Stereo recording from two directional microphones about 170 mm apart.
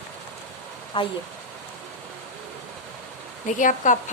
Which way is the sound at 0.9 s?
30° left (ahead or behind).